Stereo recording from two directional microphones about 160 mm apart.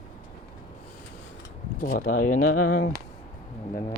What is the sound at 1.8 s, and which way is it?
Speech, 60° left (ahead or behind).